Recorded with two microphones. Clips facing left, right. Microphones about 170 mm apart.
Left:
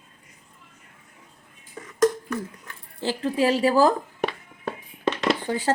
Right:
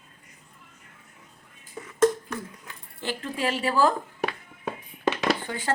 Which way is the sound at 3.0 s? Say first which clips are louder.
Left 7 dB; 35° left (ahead or behind).